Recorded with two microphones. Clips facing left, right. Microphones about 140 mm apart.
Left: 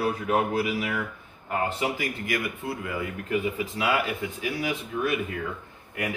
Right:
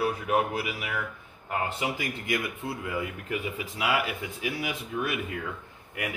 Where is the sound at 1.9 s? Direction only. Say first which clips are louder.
Left 1 dB; 20° right (ahead or behind).